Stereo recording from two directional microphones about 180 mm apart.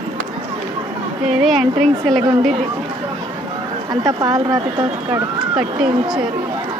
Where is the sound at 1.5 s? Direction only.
Centre (ahead or behind).